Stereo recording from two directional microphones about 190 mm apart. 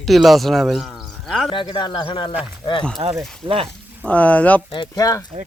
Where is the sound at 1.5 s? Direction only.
25° left (ahead or behind).